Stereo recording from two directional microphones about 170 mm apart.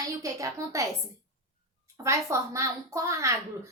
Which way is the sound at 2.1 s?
15° right (ahead or behind).